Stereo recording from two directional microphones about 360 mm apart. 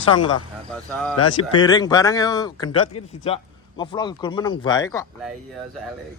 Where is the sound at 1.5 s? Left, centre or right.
Centre.